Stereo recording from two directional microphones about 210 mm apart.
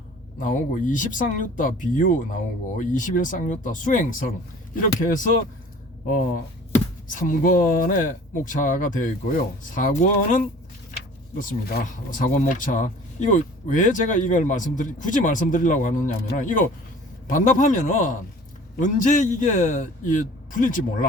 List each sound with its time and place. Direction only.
0.3 s speech: 40° left (ahead or behind)
6.7 s speech: 40° left (ahead or behind)